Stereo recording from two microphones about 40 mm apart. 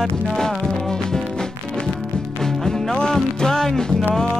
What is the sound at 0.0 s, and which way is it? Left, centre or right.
Music, centre.